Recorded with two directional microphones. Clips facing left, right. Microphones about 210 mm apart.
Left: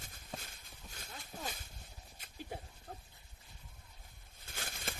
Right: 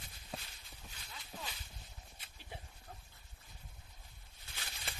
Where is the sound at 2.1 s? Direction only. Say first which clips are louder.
Left 8 dB; 45° left (ahead or behind).